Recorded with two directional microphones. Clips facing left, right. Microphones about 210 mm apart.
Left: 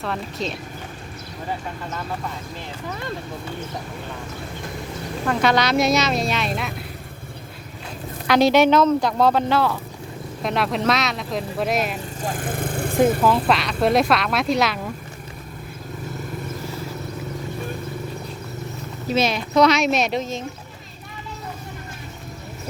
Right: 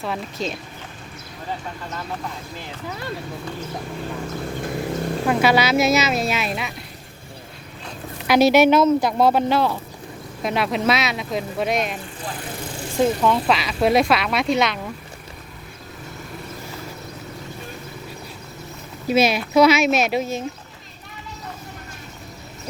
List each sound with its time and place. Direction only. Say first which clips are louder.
0.0 s speech: even; centre (ahead or behind)
5.3 s speech: right 1 dB; 5° right (ahead or behind)
8.3 s speech: right 1 dB; 5° right (ahead or behind)
10.4 s speech: right 1 dB; centre (ahead or behind)
12.2 s vehicle: left 7 dB; 50° left (ahead or behind)
13.2 s speech: left 1 dB; centre (ahead or behind)
19.0 s speech: right 3 dB; 10° right (ahead or behind)